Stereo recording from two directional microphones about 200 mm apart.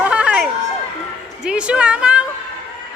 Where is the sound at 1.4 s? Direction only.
5° right (ahead or behind).